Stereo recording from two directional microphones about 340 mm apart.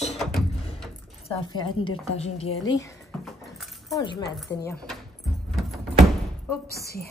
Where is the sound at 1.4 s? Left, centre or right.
Centre.